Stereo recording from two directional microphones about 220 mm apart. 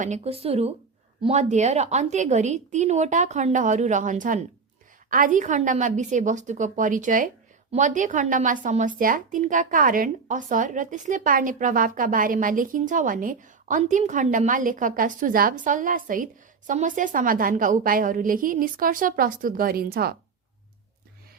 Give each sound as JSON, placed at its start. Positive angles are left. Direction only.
{"t": 0.0, "sound": "speech", "side_deg": -30}